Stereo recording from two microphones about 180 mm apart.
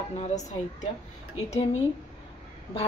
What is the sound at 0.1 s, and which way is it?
Speech, 40° left (ahead or behind).